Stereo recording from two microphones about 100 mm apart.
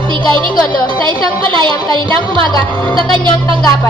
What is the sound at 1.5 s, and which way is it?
Speech, 55° right (ahead or behind).